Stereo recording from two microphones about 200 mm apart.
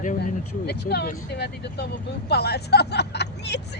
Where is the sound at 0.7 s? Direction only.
55° left (ahead or behind).